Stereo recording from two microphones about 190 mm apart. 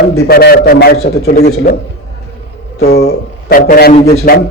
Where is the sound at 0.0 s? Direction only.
55° left (ahead or behind).